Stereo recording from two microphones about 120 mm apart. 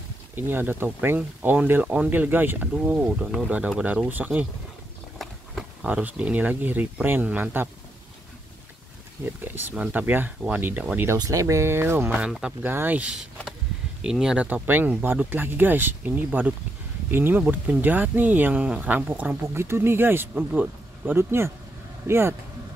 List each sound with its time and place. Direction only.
0.4 s speech: 15° right (ahead or behind)
5.9 s speech: 10° right (ahead or behind)
9.2 s speech: 15° right (ahead or behind)
11.1 s speech: 30° right (ahead or behind)
12.2 s speech: 5° right (ahead or behind)
12.6 s speech: 15° right (ahead or behind)